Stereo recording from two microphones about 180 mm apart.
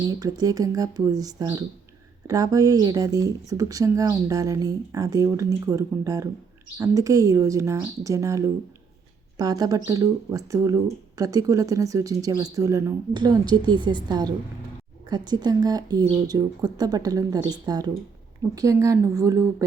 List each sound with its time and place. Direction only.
0.0 s speech: 20° right (ahead or behind)